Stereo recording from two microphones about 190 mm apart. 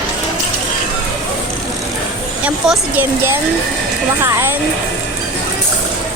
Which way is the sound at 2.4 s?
10° right (ahead or behind).